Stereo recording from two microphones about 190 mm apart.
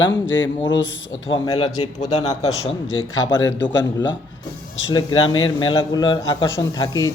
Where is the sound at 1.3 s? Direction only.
25° left (ahead or behind).